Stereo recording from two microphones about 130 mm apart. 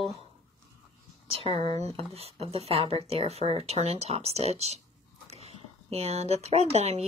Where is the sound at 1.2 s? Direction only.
50° right (ahead or behind).